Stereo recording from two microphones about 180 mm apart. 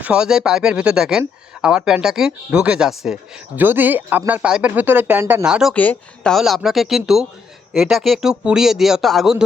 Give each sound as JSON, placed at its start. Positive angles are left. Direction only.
{"t": 0.0, "sound": "a man's voice", "side_deg": -5}
{"t": 5.7, "sound": "a man's voice", "side_deg": 10}